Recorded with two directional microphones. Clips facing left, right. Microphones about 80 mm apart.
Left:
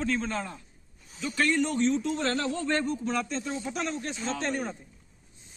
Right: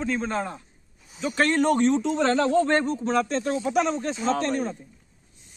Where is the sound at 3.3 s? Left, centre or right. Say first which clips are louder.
Right 9 dB; right.